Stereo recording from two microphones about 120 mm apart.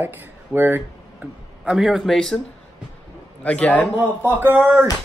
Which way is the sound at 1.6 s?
5° right (ahead or behind).